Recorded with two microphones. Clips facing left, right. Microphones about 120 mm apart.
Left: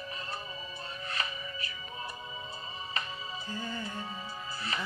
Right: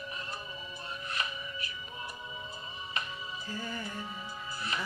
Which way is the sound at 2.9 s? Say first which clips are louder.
Even; 35° left (ahead or behind).